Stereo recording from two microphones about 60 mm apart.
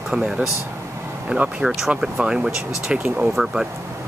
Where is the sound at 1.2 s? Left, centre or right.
Centre.